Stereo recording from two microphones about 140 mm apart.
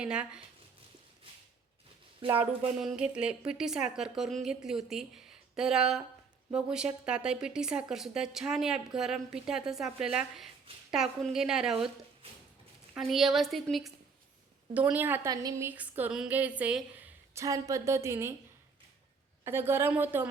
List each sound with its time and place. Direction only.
0.0 s a woman's voice: 5° right (ahead or behind)
2.3 s a woman's voice: 10° right (ahead or behind)
13.0 s a woman's voice: centre (ahead or behind)
14.7 s a woman's voice: 10° right (ahead or behind)
17.4 s a woman's voice: 25° right (ahead or behind)
19.5 s a woman's voice: 15° right (ahead or behind)